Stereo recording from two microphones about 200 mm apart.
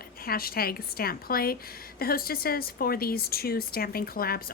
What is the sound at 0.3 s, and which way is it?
Speech, 50° left (ahead or behind).